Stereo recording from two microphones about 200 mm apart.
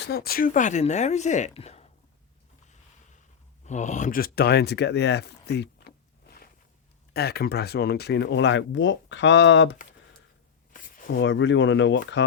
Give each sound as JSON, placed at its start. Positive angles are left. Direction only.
{"t": 0.0, "sound": "speech", "side_deg": 50}
{"t": 3.6, "sound": "speech", "side_deg": 35}
{"t": 7.1, "sound": "speech", "side_deg": 50}
{"t": 10.7, "sound": "a sound", "side_deg": 45}
{"t": 11.2, "sound": "speech", "side_deg": 65}